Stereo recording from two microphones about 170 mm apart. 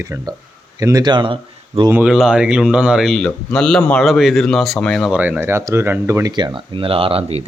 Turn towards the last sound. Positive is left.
turn(degrees=-35)  # may be behind; listen again after turning